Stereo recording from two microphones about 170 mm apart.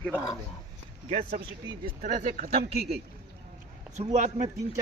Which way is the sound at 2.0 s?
50° right (ahead or behind).